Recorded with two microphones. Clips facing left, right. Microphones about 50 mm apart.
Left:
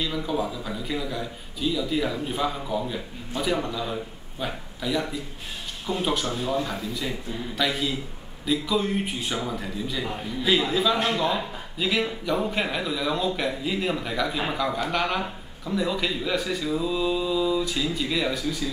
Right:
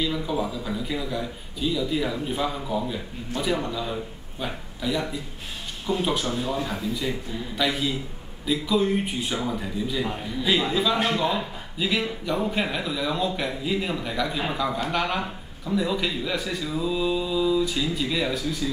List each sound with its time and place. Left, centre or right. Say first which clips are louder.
0.0 s a man's voice: right 1 dB; centre